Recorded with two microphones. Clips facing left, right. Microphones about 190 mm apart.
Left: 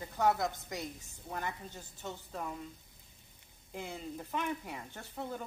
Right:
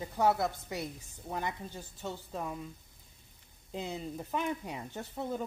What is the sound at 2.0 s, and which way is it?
Speech, 15° right (ahead or behind).